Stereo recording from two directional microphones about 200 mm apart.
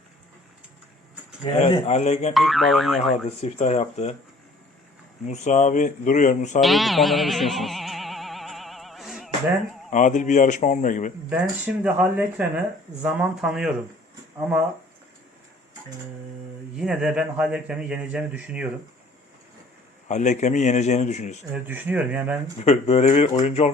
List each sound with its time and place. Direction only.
1.5 s speech: 25° left (ahead or behind)
2.3 s speech: centre (ahead or behind)
3.2 s speech: 35° left (ahead or behind)
5.2 s speech: 35° left (ahead or behind)
6.6 s a sound: centre (ahead or behind)
9.9 s speech: 40° left (ahead or behind)
11.3 s speech: 10° right (ahead or behind)
16.7 s speech: 5° right (ahead or behind)
20.1 s speech: 35° left (ahead or behind)
21.5 s speech: 10° right (ahead or behind)
22.5 s speech: 35° left (ahead or behind)